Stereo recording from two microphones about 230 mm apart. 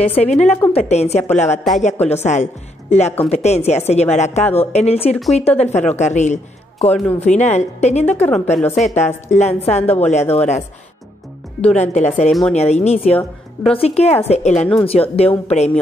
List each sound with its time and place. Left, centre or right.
0.0 s a woman's voice: left
8.5 s a woman's voice: centre
8.9 s a woman's voice: left
11.6 s a woman's voice: left
12.3 s a woman's voice: centre
12.5 s a woman's voice: left